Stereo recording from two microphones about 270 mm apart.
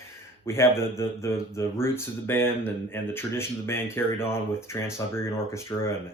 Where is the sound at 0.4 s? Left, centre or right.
Centre.